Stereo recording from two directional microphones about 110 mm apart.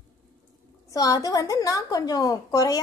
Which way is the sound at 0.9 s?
30° left (ahead or behind).